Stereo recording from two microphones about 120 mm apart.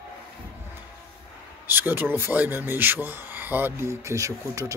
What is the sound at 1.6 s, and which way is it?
Speech, 15° right (ahead or behind).